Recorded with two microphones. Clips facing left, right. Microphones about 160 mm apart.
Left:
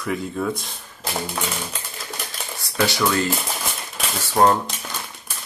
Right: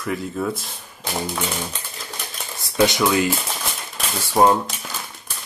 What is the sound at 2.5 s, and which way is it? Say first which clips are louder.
Speech: right 4 dB; 20° right (ahead or behind).